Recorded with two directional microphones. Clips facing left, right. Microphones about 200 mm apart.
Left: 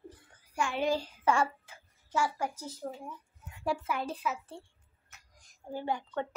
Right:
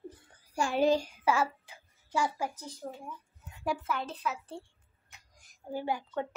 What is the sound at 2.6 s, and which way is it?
A woman's voice, 5° left (ahead or behind).